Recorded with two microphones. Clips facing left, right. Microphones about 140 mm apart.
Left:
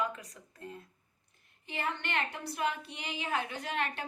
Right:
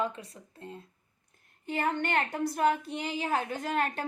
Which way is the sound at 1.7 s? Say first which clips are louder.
Right 7 dB; 45° right (ahead or behind).